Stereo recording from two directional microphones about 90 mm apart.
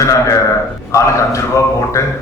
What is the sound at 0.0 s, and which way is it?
Speech, 35° left (ahead or behind).